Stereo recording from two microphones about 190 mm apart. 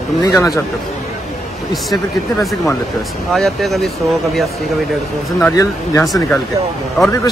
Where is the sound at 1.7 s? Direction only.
Centre (ahead or behind).